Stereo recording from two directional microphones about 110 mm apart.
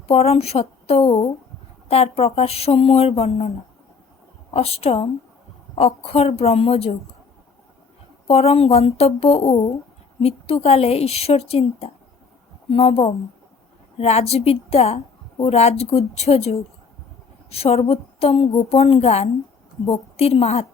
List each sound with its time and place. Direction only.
0.1 s speech: 65° left (ahead or behind)
4.5 s speech: 65° left (ahead or behind)
8.3 s a woman's voice: 70° left (ahead or behind)